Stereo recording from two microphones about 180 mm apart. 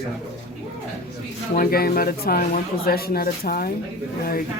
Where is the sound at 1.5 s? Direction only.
55° left (ahead or behind).